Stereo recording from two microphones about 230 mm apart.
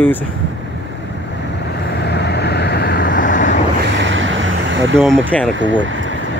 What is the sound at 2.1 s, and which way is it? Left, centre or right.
Vehicle, left.